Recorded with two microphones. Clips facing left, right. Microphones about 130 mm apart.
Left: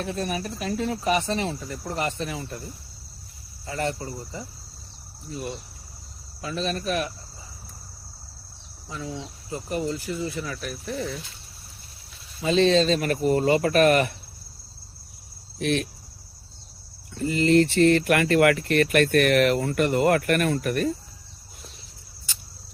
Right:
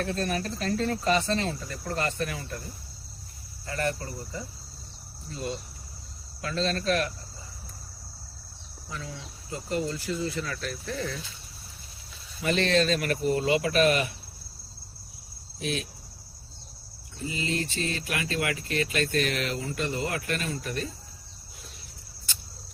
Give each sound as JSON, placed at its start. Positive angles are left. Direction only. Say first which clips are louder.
{"t": 0.0, "sound": "speech", "louder": "even", "side_deg": 15}
{"t": 3.7, "sound": "speech", "louder": "left 2 dB", "side_deg": 20}
{"t": 8.9, "sound": "speech", "louder": "left 5 dB", "side_deg": 20}
{"t": 12.4, "sound": "speech", "louder": "left 5 dB", "side_deg": 20}
{"t": 12.9, "sound": "speech", "louder": "left 4 dB", "side_deg": 35}
{"t": 15.5, "sound": "speech", "louder": "left 7 dB", "side_deg": 60}
{"t": 17.2, "sound": "speech", "louder": "left 12 dB", "side_deg": 60}